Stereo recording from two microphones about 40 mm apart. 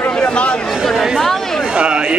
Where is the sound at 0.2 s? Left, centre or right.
Left.